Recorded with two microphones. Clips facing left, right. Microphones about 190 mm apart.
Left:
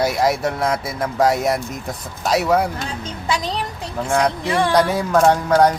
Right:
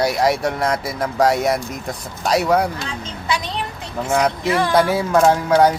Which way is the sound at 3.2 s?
40° left (ahead or behind).